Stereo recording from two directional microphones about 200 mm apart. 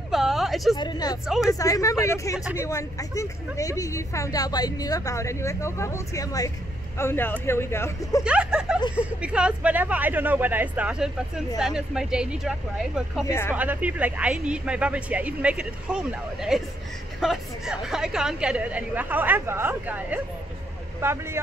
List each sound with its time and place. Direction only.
0.1 s a sound: centre (ahead or behind)
0.7 s a woman's voice: 20° left (ahead or behind)
8.2 s speech: 5° right (ahead or behind)
13.3 s a woman's voice: 10° left (ahead or behind)
13.6 s speech: 5° right (ahead or behind)